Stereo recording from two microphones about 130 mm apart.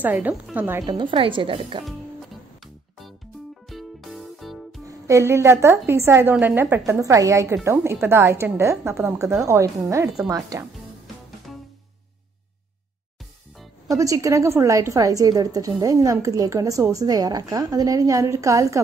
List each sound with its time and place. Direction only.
0.0 s a woman's voice: 15° right (ahead or behind)
0.7 s speech: 35° right (ahead or behind)
3.6 s music: centre (ahead or behind)
4.8 s a woman's voice: 25° right (ahead or behind)
11.5 s music: centre (ahead or behind)
13.8 s a woman's voice: 25° right (ahead or behind)